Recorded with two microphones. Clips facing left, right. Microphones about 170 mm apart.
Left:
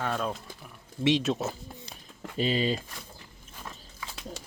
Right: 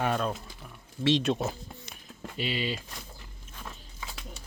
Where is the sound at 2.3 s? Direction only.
40° left (ahead or behind).